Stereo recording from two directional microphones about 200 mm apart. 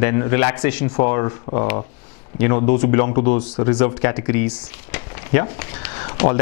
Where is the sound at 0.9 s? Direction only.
20° left (ahead or behind).